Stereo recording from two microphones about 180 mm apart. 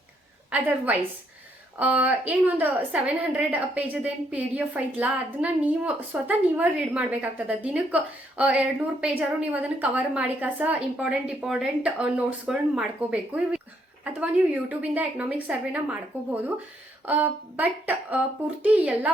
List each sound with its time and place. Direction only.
0.5 s a woman's voice: 10° right (ahead or behind)